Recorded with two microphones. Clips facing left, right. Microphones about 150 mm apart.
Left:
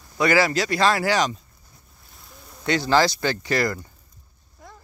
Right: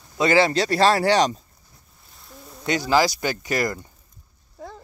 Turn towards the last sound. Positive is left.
turn(degrees=-20)  # may be behind; listen again after turning